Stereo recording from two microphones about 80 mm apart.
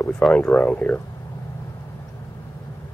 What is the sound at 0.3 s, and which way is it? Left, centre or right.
Speech, centre.